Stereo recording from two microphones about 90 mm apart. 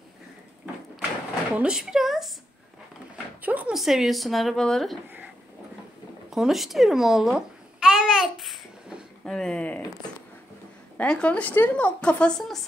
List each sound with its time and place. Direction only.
1.6 s a woman's voice: 10° right (ahead or behind)
3.4 s a sound: 15° right (ahead or behind)
3.7 s a woman's voice: centre (ahead or behind)
6.3 s babbling: 5° right (ahead or behind)
9.2 s a sound: 5° left (ahead or behind)
11.0 s speech: 15° left (ahead or behind)